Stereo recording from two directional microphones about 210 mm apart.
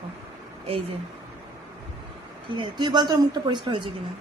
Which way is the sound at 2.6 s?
20° right (ahead or behind).